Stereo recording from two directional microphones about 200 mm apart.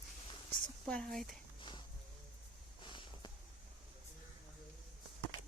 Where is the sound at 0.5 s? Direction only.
5° left (ahead or behind).